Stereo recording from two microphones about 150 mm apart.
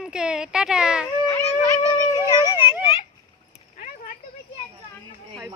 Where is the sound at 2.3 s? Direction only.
30° left (ahead or behind).